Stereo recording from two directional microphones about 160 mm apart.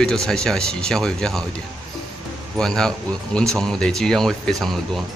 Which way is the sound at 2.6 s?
5° left (ahead or behind).